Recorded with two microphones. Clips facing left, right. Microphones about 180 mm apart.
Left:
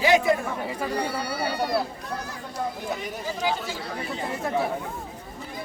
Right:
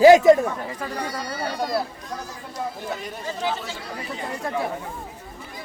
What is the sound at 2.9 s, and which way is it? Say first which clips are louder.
Speech: even; centre (ahead or behind).